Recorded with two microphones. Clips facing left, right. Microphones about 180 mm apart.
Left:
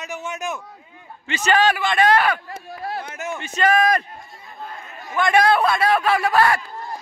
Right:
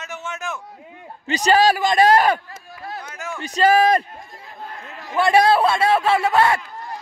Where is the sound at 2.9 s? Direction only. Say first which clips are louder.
Left 2 dB; 25° left (ahead or behind).